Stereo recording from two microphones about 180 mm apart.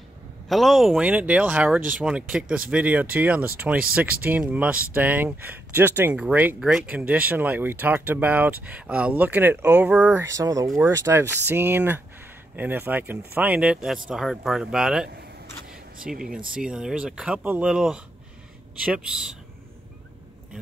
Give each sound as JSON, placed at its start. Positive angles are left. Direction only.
{"t": 0.5, "sound": "speech", "side_deg": 0}
{"t": 10.2, "sound": "speech", "side_deg": -20}
{"t": 16.1, "sound": "speech", "side_deg": -5}